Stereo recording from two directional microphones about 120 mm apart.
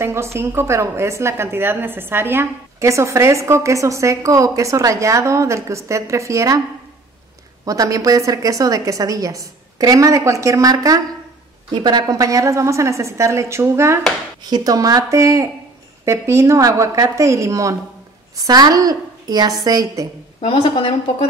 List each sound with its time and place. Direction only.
0.0 s a woman's voice: 20° right (ahead or behind)
7.6 s a woman's voice: 30° right (ahead or behind)
20.3 s a woman's voice: 50° left (ahead or behind)